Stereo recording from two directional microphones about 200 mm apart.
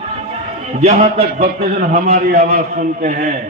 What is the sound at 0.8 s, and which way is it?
A man's voice, 35° right (ahead or behind).